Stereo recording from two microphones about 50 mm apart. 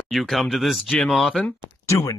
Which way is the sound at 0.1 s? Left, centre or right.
Centre.